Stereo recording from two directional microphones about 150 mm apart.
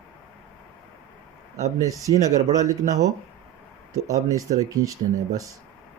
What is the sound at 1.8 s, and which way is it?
Speech, 20° right (ahead or behind).